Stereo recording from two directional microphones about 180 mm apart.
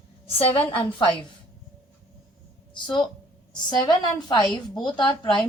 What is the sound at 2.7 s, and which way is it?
A woman's voice, 25° left (ahead or behind).